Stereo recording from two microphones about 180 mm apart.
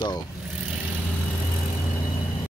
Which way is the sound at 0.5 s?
5° right (ahead or behind).